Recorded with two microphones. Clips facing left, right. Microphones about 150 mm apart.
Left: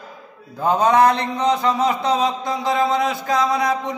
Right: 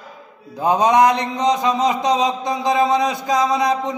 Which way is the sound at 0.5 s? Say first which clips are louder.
Right 1 dB; 15° right (ahead or behind).